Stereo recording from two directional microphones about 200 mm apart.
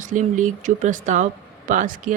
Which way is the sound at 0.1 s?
40° right (ahead or behind).